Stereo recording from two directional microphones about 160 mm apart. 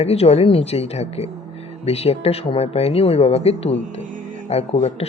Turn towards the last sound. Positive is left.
turn(degrees=40)  # may be behind; listen again after turning